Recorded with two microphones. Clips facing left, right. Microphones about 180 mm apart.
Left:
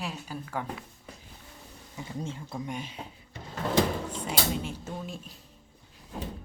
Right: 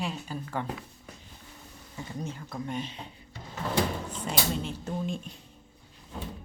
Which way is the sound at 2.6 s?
10° left (ahead or behind).